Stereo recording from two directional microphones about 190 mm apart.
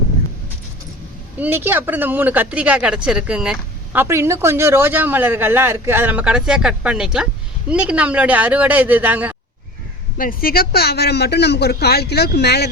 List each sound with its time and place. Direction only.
1.4 s speech: 10° right (ahead or behind)
10.2 s speech: 50° left (ahead or behind)